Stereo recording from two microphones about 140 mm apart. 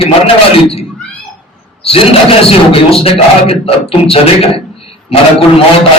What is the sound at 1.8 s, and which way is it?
A man's voice, 45° left (ahead or behind).